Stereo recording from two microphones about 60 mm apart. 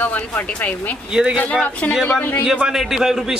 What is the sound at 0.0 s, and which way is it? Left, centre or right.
Speech, left.